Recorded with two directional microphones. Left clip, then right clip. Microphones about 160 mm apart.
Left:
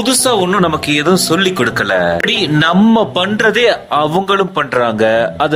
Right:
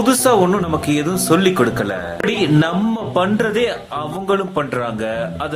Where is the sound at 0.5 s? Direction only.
50° left (ahead or behind).